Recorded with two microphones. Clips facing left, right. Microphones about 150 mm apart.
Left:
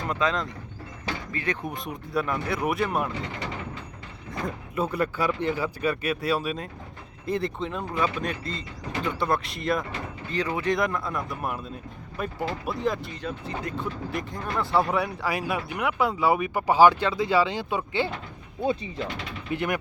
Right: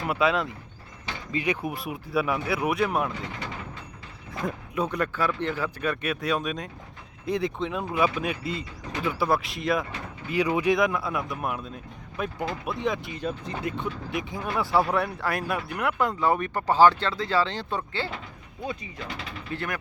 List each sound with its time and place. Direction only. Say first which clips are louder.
0.1 s speech: right 3 dB; 10° right (ahead or behind)
4.4 s speech: right 1 dB; centre (ahead or behind)
10.2 s speech: right 3 dB; 10° right (ahead or behind)
13.1 s speech: right 2 dB; 15° right (ahead or behind)
13.7 s speech: even; centre (ahead or behind)
18.6 s speech: left 7 dB; 30° left (ahead or behind)